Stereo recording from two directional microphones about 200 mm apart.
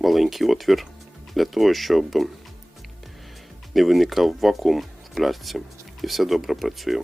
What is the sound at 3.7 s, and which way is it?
Speech, centre (ahead or behind).